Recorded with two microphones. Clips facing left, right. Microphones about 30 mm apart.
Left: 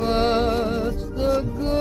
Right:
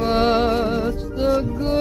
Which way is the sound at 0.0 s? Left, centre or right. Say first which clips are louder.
Right 2 dB; centre.